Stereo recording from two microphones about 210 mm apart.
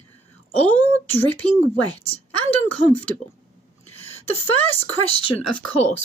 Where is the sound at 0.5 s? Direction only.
5° left (ahead or behind).